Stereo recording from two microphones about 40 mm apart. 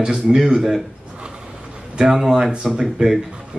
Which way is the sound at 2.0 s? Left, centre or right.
Centre.